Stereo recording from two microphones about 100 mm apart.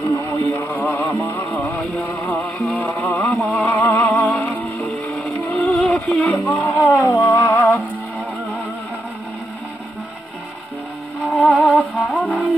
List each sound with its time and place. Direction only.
0.3 s music: 20° left (ahead or behind)
2.8 s a sound: 15° left (ahead or behind)
6.0 s music: 10° left (ahead or behind); by 7.6 s 30° left (ahead or behind)
11.2 s music: 15° left (ahead or behind)